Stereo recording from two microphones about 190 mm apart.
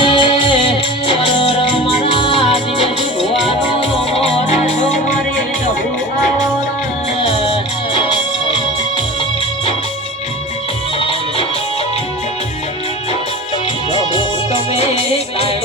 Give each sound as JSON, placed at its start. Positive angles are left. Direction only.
{"t": 0.0, "sound": "music", "side_deg": 25}
{"t": 7.9, "sound": "music", "side_deg": 30}
{"t": 14.8, "sound": "music", "side_deg": 30}